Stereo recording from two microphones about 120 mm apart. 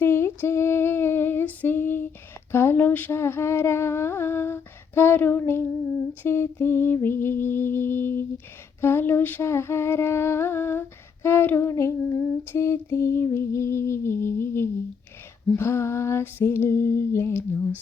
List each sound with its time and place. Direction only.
0.0 s female singing: 20° left (ahead or behind)
2.5 s a sound: 20° left (ahead or behind)
6.2 s female singing: 20° left (ahead or behind)